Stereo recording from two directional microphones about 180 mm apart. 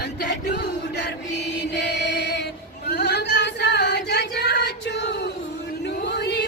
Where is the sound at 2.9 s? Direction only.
70° left (ahead or behind).